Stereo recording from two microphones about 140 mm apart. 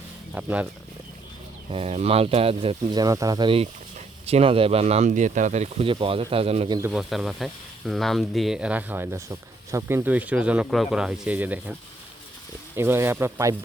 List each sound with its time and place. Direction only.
0.3 s speech: 10° right (ahead or behind)
1.7 s speech: 45° right (ahead or behind)
3.0 s speech: 25° right (ahead or behind); by 6.7 s 45° right (ahead or behind)
6.7 s speech: 20° right (ahead or behind)
6.9 s speech: centre (ahead or behind)
12.7 s speech: 20° right (ahead or behind)